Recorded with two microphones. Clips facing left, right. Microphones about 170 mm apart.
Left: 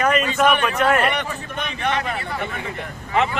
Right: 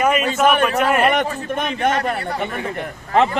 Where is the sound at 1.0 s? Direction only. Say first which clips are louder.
Right 5 dB; 45° right (ahead or behind).